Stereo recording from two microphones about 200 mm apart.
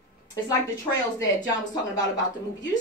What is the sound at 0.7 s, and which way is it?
Speech, 20° left (ahead or behind).